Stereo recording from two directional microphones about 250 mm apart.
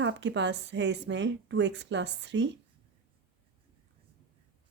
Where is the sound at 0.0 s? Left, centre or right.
Right.